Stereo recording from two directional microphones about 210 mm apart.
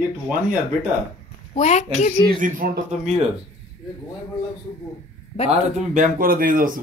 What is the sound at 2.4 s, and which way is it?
Speech, 40° right (ahead or behind).